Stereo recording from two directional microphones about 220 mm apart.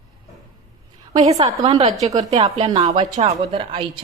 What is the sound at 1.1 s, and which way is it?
A woman's voice, 30° right (ahead or behind).